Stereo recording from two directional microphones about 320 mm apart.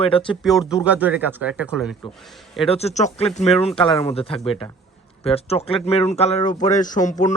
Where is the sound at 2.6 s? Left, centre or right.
Centre.